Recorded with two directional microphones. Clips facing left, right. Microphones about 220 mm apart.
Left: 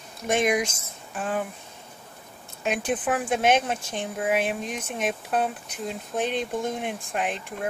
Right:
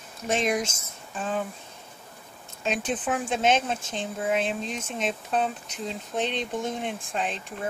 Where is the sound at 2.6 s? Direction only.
10° left (ahead or behind).